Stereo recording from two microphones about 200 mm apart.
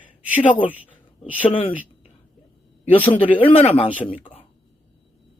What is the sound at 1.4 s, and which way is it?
Speech, 25° left (ahead or behind).